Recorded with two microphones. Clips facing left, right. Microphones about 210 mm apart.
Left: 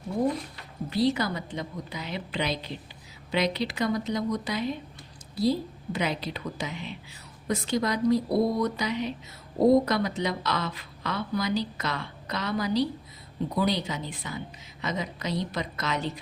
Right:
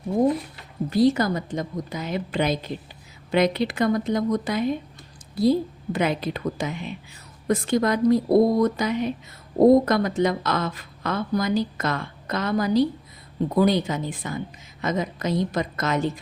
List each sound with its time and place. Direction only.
0.9 s speech: 45° right (ahead or behind)